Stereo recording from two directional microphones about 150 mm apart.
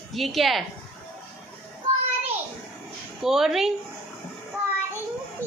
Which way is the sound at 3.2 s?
Centre (ahead or behind).